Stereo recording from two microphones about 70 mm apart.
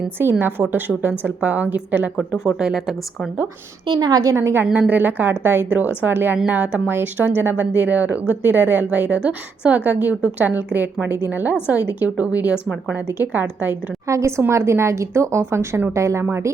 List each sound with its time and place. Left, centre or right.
0.2 s a woman's voice: right
2.1 s speech: centre
3.8 s a woman's voice: right
4.2 s a woman's voice: right
4.6 s speech: right
14.1 s a woman's voice: right